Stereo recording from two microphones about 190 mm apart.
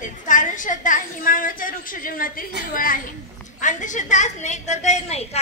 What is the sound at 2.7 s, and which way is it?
A woman's voice, 45° left (ahead or behind).